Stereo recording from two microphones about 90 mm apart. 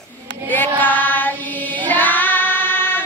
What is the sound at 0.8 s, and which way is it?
Carnatic music, 20° left (ahead or behind).